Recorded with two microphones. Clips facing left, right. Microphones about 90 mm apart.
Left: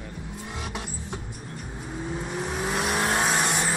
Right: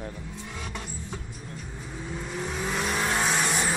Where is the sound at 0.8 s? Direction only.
5° left (ahead or behind).